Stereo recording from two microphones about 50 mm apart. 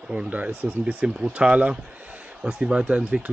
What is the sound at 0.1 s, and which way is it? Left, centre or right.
Speech, right.